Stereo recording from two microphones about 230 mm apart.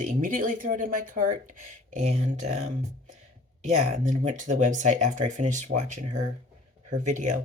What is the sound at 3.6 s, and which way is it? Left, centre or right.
Speech, right.